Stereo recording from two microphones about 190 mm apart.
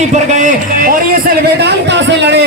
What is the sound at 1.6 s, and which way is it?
Speech, 65° right (ahead or behind).